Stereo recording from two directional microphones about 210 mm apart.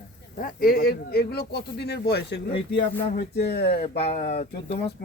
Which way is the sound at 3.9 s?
30° left (ahead or behind).